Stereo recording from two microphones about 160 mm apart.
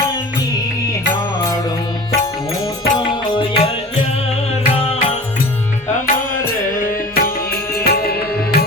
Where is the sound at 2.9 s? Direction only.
30° left (ahead or behind).